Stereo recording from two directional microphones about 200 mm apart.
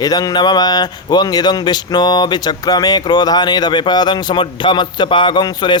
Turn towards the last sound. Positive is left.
turn(degrees=20)  # may be behind; listen again after turning